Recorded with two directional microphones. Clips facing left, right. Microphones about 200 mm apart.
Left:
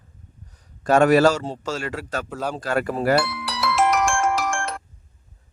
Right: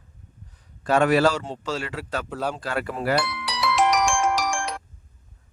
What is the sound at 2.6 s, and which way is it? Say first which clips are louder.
Speech: left 5 dB; 45° left (ahead or behind).